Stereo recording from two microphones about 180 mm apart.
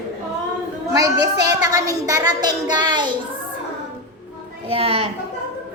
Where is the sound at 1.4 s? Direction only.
20° right (ahead or behind).